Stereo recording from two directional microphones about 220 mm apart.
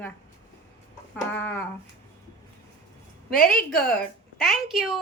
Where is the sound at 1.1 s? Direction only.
10° left (ahead or behind).